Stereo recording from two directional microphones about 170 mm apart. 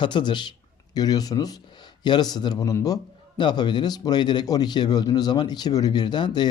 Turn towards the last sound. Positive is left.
turn(degrees=25)  # may be behind; listen again after turning